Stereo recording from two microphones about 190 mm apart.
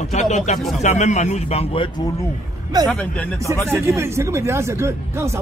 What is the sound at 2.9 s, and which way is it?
Speech, 10° left (ahead or behind).